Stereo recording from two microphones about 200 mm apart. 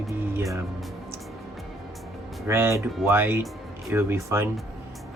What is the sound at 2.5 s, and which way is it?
Speech, 10° right (ahead or behind).